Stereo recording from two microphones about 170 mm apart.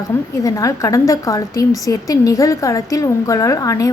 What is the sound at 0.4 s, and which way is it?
A woman's voice, 20° left (ahead or behind).